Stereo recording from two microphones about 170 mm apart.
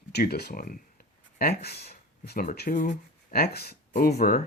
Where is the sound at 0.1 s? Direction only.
70° left (ahead or behind); by 2.9 s 50° left (ahead or behind).